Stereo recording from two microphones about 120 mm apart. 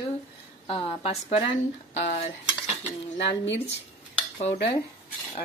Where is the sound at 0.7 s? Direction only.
50° left (ahead or behind); by 2.3 s 70° left (ahead or behind).